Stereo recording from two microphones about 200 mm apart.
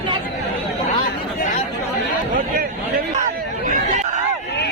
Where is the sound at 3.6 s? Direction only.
35° right (ahead or behind).